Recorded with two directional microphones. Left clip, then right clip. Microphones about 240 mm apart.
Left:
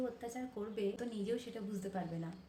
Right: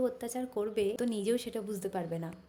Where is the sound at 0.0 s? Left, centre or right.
Right.